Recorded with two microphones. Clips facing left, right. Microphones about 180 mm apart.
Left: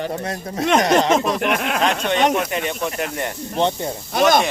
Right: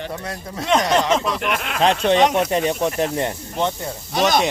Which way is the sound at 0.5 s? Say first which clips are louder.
Left 2 dB; 50° left (ahead or behind).